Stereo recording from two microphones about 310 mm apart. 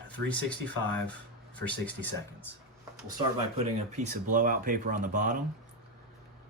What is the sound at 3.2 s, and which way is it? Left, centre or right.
Speech, centre.